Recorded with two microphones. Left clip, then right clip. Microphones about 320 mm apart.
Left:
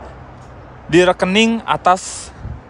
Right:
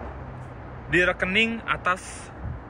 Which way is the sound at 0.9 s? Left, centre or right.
Centre.